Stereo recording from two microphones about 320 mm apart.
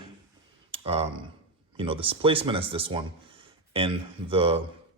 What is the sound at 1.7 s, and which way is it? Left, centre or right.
A man's voice, centre.